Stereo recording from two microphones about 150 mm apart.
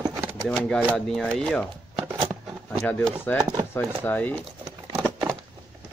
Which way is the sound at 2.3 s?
10° right (ahead or behind).